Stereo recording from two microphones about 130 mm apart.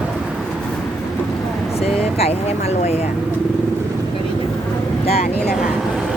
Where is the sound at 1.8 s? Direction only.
50° left (ahead or behind).